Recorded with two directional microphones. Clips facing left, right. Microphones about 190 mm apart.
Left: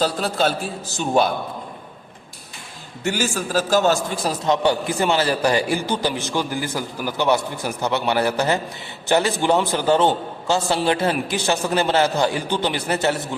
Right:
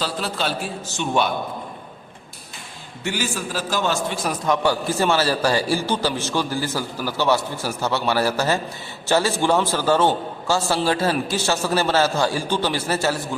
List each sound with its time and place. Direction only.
0.0 s a man's voice: 45° left (ahead or behind)
3.0 s a man's voice: 45° left (ahead or behind); by 13.3 s 20° left (ahead or behind)